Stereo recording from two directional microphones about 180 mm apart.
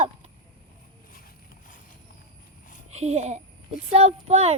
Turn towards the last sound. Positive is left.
turn(degrees=-35)  # may be behind; listen again after turning